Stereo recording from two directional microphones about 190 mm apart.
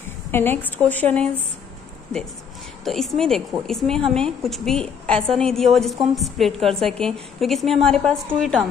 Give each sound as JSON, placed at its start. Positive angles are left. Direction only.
{"t": 0.3, "sound": "a woman's voice", "side_deg": 10}
{"t": 2.8, "sound": "a woman's voice", "side_deg": 0}